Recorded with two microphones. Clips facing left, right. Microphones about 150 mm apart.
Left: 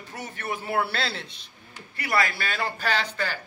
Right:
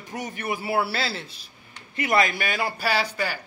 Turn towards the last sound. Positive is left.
turn(degrees=-10)  # may be behind; listen again after turning